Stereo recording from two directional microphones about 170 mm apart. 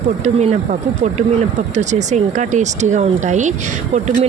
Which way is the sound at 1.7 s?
45° right (ahead or behind).